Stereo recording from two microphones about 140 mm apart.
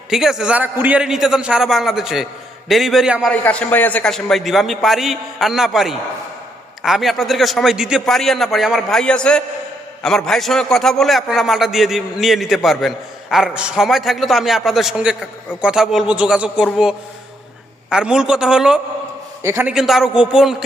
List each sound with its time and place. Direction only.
0.1 s a man's voice: 5° right (ahead or behind)
3.4 s a man's voice: 10° left (ahead or behind); by 18.8 s 5° right (ahead or behind)
19.4 s a man's voice: 20° right (ahead or behind)
19.7 s a man's voice: centre (ahead or behind)